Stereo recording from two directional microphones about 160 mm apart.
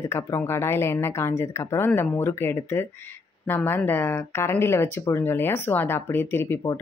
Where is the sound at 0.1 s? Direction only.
15° left (ahead or behind).